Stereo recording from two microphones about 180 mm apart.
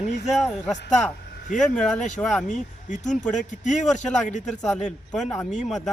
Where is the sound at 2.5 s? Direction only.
40° left (ahead or behind).